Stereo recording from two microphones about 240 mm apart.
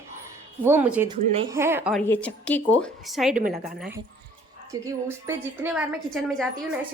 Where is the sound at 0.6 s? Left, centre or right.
Centre.